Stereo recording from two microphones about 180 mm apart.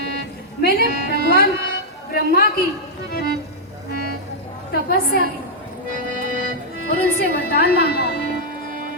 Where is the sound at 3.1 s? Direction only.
55° left (ahead or behind).